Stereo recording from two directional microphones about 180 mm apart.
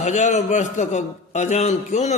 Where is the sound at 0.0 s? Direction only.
40° left (ahead or behind).